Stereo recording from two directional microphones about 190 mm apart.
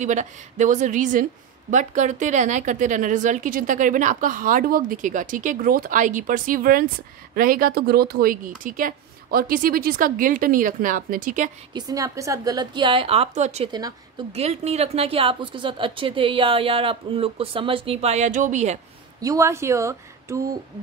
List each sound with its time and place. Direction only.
0.0 s a woman's voice: 40° right (ahead or behind)
11.7 s speech: 20° right (ahead or behind); by 13.7 s 35° right (ahead or behind)
13.7 s speech: 20° right (ahead or behind)
14.3 s speech: 35° right (ahead or behind)
19.2 s speech: 15° right (ahead or behind)